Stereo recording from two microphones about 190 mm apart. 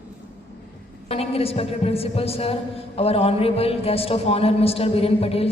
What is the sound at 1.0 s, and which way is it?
A woman's voice, 30° left (ahead or behind).